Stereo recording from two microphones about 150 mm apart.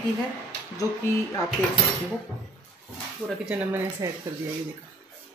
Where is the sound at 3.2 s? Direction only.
5° right (ahead or behind).